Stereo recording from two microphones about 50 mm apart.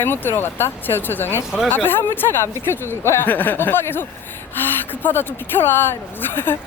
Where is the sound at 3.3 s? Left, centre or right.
Left.